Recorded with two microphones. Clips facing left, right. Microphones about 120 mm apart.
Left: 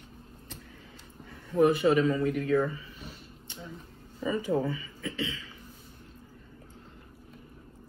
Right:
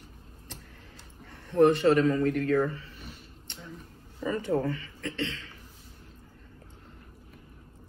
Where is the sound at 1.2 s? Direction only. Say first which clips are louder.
Right 2 dB; 5° left (ahead or behind).